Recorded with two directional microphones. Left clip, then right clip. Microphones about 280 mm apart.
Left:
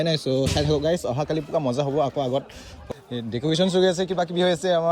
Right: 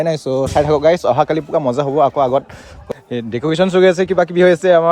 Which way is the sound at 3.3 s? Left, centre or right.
Right.